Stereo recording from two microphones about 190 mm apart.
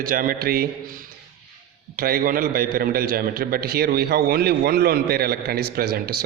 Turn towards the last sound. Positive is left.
turn(degrees=-55)  # may be behind; listen again after turning